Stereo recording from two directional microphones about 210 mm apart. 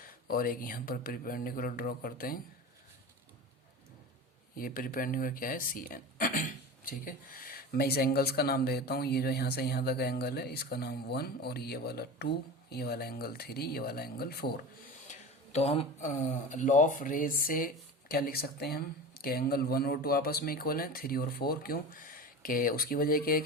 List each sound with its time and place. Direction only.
0.0 s speech: 45° left (ahead or behind)
4.5 s speech: 45° left (ahead or behind)
15.5 s speech: 30° left (ahead or behind); by 23.4 s 45° left (ahead or behind)